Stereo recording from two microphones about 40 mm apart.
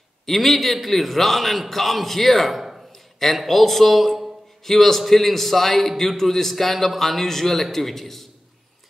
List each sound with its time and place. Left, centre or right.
0.3 s a man's voice: centre
2.6 s a sound: centre
3.2 s a man's voice: centre